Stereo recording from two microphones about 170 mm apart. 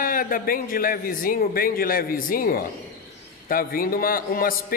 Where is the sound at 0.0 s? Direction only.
55° left (ahead or behind).